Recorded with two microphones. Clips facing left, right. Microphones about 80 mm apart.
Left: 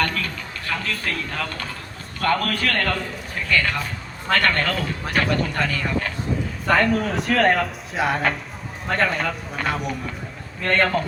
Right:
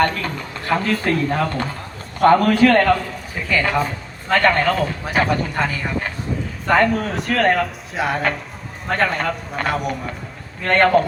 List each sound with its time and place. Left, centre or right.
0.0 s a man's voice: right
3.5 s a man's voice: centre
6.7 s a man's voice: centre